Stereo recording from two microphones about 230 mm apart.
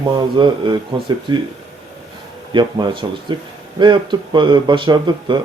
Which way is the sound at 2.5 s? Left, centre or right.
Centre.